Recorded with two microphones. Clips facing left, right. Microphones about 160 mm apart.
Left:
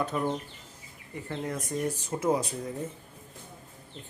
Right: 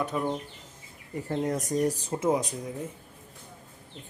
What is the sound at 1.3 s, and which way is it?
Speech, 40° right (ahead or behind).